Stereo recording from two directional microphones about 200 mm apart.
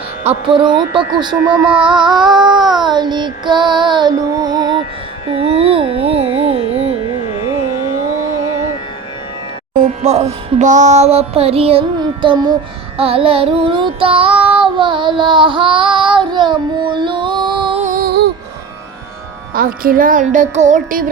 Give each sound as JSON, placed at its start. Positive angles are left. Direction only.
{"t": 0.3, "sound": "child singing", "side_deg": -25}
{"t": 1.5, "sound": "child singing", "side_deg": -10}
{"t": 2.0, "sound": "child singing", "side_deg": -20}
{"t": 5.3, "sound": "carnatic music", "side_deg": -30}
{"t": 7.2, "sound": "carnatic music", "side_deg": 30}
{"t": 9.8, "sound": "music", "side_deg": -35}
{"t": 13.0, "sound": "child singing", "side_deg": -30}
{"t": 17.8, "sound": "music", "side_deg": -45}
{"t": 19.5, "sound": "music", "side_deg": -45}